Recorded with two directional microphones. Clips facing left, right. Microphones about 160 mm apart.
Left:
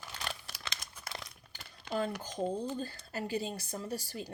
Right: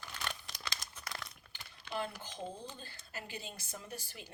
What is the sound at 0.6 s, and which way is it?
Crumpling, 25° left (ahead or behind).